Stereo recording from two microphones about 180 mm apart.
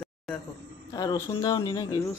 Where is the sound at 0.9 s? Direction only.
20° left (ahead or behind).